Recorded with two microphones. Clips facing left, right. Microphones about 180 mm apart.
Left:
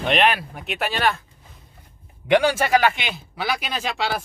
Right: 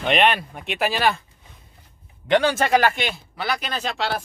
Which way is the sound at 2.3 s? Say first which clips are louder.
Left 1 dB; 10° left (ahead or behind).